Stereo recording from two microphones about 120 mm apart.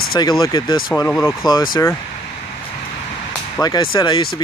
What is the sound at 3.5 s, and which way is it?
Speech, 35° left (ahead or behind).